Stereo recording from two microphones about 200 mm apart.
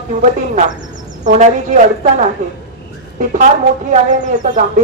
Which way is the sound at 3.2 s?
40° right (ahead or behind).